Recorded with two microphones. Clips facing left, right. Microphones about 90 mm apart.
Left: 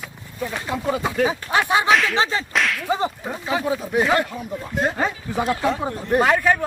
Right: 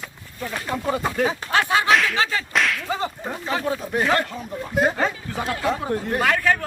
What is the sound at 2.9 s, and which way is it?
Speech, 20° left (ahead or behind).